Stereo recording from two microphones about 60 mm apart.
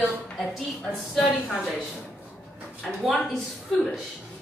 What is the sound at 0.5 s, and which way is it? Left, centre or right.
Speech, centre.